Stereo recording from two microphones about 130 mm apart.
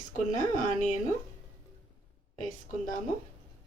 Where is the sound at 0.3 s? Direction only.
70° left (ahead or behind).